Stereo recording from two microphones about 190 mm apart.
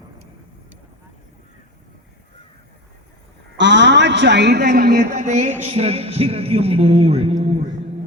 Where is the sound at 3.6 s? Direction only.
65° right (ahead or behind).